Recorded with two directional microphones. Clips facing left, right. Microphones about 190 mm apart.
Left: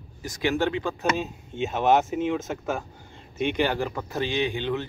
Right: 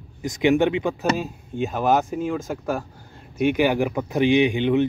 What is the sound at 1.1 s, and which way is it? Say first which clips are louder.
Speech: right 3 dB; centre (ahead or behind).